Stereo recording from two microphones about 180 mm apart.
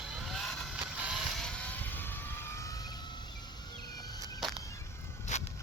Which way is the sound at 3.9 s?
20° left (ahead or behind).